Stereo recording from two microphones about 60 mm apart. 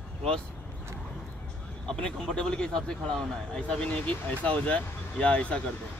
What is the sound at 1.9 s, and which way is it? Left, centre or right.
A man's voice, centre.